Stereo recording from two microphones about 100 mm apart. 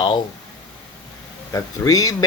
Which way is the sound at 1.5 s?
35° left (ahead or behind).